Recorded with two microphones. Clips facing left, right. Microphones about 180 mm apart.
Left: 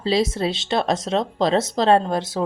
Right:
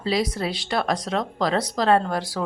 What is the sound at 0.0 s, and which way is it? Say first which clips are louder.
Speech: left 4 dB; 25° left (ahead or behind).